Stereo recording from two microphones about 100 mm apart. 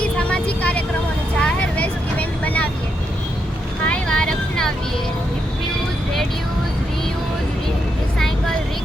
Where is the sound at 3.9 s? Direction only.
10° left (ahead or behind).